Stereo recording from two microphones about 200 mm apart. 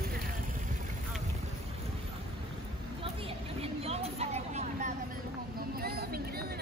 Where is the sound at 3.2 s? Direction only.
30° right (ahead or behind).